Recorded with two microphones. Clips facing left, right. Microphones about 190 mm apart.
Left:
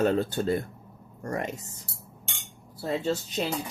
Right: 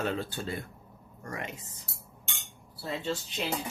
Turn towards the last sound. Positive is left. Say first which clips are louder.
# left 5 dB
turn(degrees=40)  # may be behind; listen again after turning